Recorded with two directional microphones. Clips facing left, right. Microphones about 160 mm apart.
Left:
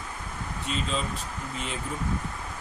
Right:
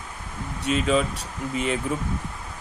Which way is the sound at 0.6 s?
70° right (ahead or behind).